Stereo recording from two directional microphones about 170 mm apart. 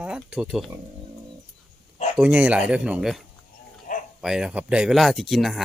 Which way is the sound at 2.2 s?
5° right (ahead or behind).